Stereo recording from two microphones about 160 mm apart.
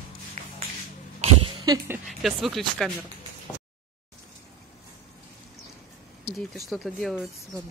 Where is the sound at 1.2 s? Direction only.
35° right (ahead or behind).